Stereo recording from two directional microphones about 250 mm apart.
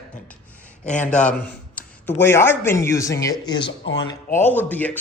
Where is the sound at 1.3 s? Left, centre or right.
Centre.